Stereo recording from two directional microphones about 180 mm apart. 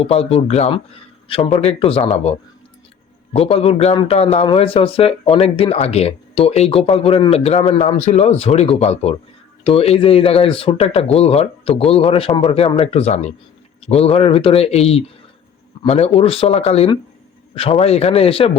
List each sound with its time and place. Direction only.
0.0 s speech: 35° left (ahead or behind)
3.3 s speech: 35° left (ahead or behind)